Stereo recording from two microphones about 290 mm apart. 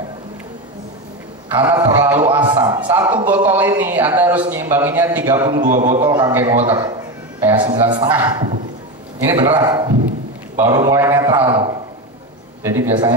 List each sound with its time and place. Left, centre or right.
1.5 s a man's voice: centre